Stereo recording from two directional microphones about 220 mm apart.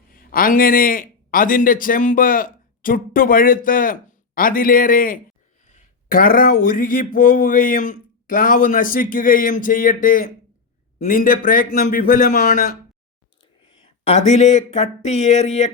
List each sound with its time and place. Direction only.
0.1 s a man's voice: 40° left (ahead or behind)
13.4 s speech: 20° left (ahead or behind)